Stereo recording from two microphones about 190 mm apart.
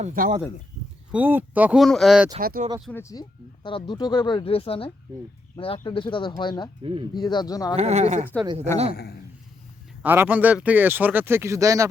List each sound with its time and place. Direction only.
0.0 s speech: 40° right (ahead or behind)
1.1 s speech: 10° right (ahead or behind)
2.4 s speech: 50° right (ahead or behind)
2.9 s speech: 15° left (ahead or behind)
7.8 s speech: 35° right (ahead or behind)
10.0 s speech: 10° right (ahead or behind)